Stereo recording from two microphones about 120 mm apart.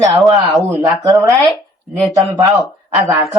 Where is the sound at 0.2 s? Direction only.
Centre (ahead or behind).